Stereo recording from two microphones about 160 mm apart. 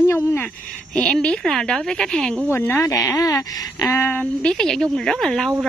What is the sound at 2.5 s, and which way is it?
A woman's voice, 15° left (ahead or behind).